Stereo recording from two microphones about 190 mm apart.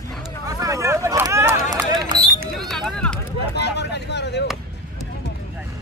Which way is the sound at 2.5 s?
Centre (ahead or behind).